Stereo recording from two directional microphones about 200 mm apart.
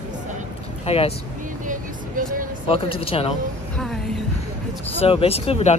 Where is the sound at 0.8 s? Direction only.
30° left (ahead or behind).